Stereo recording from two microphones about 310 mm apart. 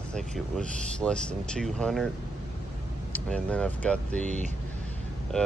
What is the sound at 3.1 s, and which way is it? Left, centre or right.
Speech, centre.